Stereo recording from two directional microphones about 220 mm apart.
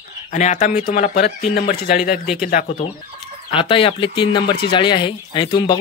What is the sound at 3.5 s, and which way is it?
Speech, 25° left (ahead or behind).